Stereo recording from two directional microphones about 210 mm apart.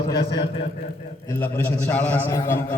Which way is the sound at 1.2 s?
10° left (ahead or behind).